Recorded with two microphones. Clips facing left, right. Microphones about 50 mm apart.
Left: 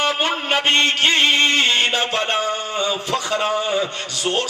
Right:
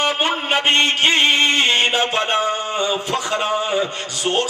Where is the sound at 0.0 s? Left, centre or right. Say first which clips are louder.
Right 1 dB; centre.